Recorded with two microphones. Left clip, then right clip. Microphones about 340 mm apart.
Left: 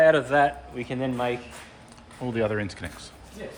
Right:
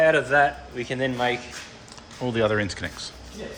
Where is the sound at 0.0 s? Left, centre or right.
Left.